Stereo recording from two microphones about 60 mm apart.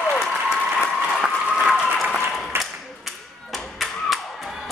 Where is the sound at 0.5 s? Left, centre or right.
Centre.